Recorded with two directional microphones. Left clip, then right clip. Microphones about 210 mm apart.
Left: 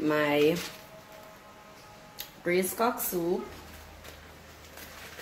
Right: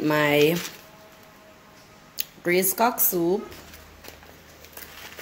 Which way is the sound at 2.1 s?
50° right (ahead or behind).